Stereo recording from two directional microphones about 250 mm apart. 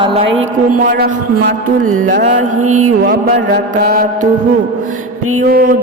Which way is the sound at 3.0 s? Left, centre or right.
Right.